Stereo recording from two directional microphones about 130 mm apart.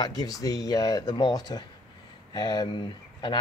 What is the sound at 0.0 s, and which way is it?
Speech, 30° left (ahead or behind).